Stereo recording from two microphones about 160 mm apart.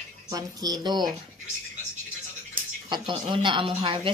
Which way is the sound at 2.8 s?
30° right (ahead or behind).